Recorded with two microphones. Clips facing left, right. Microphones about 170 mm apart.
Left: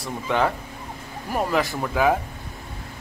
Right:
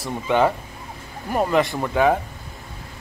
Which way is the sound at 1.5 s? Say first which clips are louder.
Right 4 dB; centre (ahead or behind).